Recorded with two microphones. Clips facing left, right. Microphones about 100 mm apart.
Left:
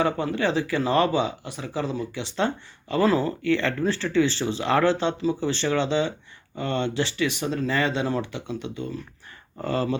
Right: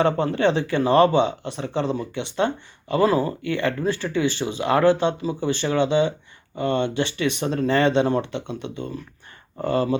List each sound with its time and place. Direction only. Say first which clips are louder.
0.0 s speech: right 4 dB; 30° right (ahead or behind)